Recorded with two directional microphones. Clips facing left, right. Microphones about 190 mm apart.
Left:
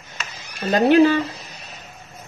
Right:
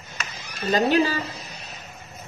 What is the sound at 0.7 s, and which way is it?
Speech, 60° left (ahead or behind).